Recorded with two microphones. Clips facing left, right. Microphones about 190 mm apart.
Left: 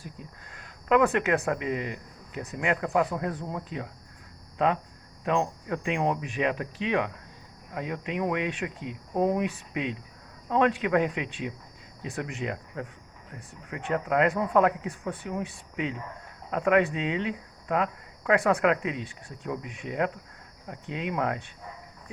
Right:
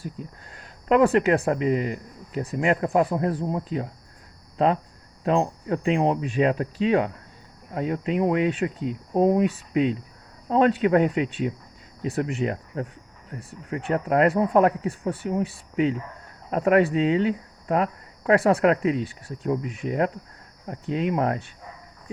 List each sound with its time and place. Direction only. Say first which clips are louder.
0.5 s speech: right 3 dB; 30° right (ahead or behind)